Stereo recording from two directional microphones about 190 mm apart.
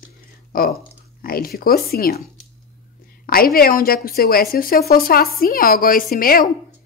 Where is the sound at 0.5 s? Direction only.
50° left (ahead or behind).